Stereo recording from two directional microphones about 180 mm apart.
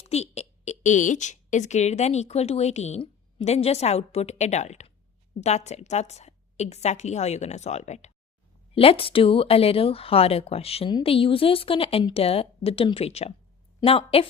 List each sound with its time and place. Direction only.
0.0 s speech: 35° left (ahead or behind)